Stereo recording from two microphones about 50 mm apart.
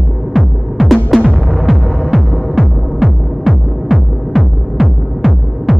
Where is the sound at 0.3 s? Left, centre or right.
Centre.